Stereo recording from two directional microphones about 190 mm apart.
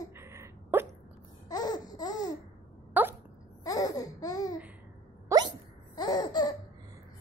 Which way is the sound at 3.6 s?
20° left (ahead or behind).